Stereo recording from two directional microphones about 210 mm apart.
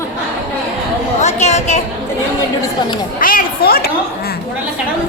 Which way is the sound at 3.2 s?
40° left (ahead or behind).